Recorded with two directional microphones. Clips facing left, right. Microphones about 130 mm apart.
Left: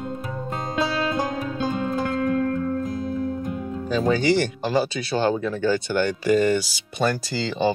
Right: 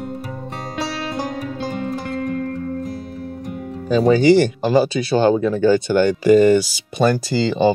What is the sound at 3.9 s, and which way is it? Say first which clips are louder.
Speech: right 7 dB; 15° right (ahead or behind).